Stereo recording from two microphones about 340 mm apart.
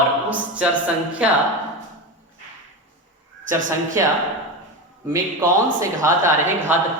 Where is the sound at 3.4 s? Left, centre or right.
Right.